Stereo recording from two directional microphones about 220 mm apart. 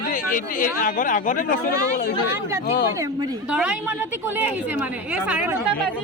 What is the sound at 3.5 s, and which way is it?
Speech, 5° right (ahead or behind).